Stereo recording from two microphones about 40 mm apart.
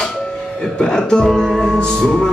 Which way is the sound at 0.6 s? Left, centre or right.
Centre.